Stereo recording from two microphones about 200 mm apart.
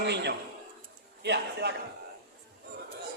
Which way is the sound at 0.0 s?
60° right (ahead or behind).